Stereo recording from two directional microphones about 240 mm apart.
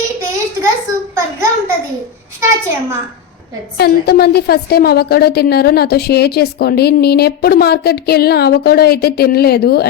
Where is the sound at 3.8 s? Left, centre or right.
Left.